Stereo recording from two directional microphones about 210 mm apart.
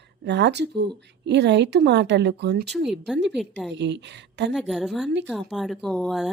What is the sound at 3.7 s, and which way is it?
Speech, 55° right (ahead or behind).